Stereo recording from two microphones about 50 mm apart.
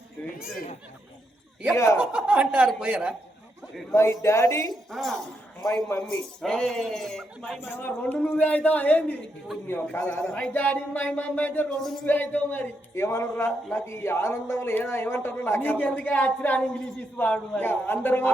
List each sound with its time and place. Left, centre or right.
1.7 s speech: left
2.1 s speech: right
3.9 s speech: left
4.7 s a woman's voice: centre
5.6 s speech: left
6.1 s speech: centre
7.6 s a sound: left
8.2 s speech: left
9.6 s a man's voice: left
10.5 s a sound: left
11.8 s a woman's voice: centre
12.0 s a sound: left
12.9 s speech: left
17.6 s a man's voice: left